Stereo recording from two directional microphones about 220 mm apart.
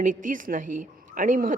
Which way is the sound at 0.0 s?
35° right (ahead or behind).